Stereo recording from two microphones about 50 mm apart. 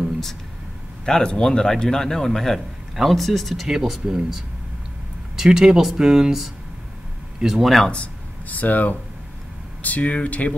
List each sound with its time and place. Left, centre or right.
1.0 s a man's voice: centre
7.4 s speech: centre
8.5 s speech: left